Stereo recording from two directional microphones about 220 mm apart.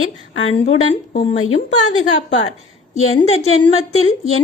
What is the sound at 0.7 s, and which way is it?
Speech, 25° left (ahead or behind).